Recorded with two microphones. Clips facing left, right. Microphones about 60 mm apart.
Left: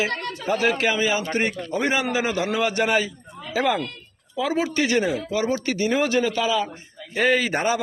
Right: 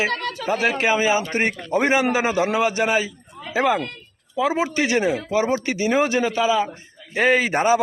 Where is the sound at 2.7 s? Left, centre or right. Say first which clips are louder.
Right 1 dB; centre.